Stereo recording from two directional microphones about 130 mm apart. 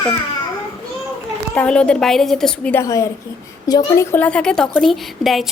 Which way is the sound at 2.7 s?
25° left (ahead or behind).